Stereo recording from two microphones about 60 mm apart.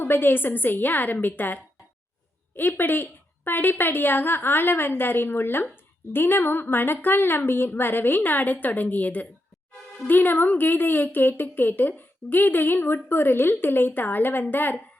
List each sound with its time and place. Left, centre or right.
0.0 s speech: left